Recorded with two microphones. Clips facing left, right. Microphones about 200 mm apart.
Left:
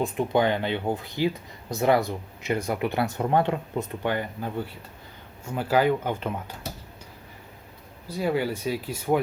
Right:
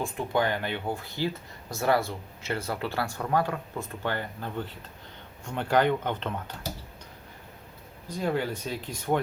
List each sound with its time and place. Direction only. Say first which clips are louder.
0.0 s speech: left 4 dB; 20° left (ahead or behind)
8.0 s speech: left 3 dB; 10° left (ahead or behind)